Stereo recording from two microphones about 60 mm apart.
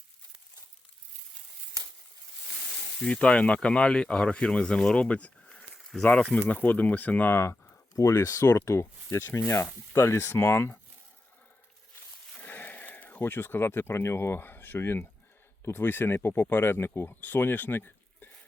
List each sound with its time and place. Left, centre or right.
3.0 s speech: centre
7.9 s speech: left
8.6 s speech: left
12.4 s speech: left
17.2 s speech: left